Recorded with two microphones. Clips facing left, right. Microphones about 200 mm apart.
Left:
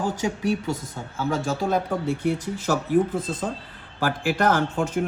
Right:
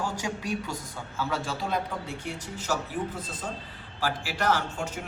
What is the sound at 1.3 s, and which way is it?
Speech, 45° left (ahead or behind).